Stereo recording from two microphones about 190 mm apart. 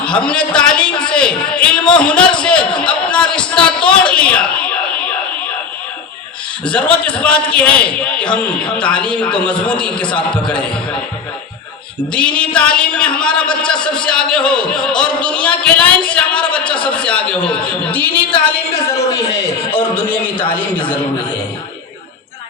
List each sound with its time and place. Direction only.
0.0 s a man's voice: 5° left (ahead or behind)
6.7 s a man's voice: 5° left (ahead or behind)
12.1 s a man's voice: 5° left (ahead or behind)
19.3 s a man's voice: 25° left (ahead or behind)